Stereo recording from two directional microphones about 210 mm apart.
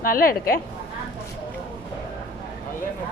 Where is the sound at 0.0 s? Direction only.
45° left (ahead or behind).